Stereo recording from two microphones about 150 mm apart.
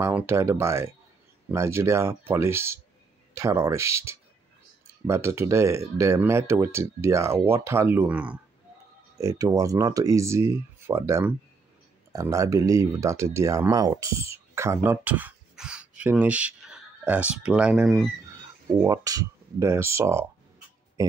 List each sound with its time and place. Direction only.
0.0 s speech: 15° right (ahead or behind)
9.2 s speech: 25° right (ahead or behind); by 18.0 s 5° right (ahead or behind)
18.8 s speech: 20° right (ahead or behind)